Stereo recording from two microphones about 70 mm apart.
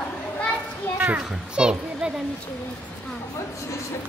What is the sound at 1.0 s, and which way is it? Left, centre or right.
Children playing, right.